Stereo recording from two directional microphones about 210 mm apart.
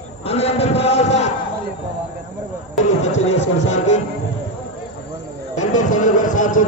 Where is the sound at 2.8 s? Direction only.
35° left (ahead or behind).